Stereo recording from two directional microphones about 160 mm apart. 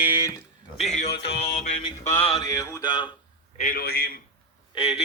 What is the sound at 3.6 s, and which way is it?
Speech, 70° left (ahead or behind).